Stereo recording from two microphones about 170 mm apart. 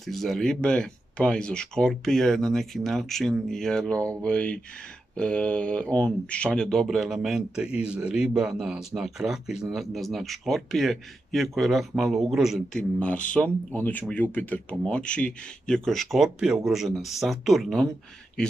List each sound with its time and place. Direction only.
0.0 s speech: centre (ahead or behind)